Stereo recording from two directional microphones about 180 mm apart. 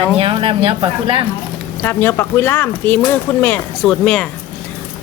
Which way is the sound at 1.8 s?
10° left (ahead or behind).